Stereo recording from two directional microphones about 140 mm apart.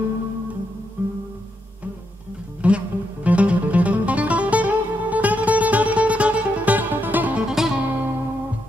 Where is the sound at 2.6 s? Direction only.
10° right (ahead or behind).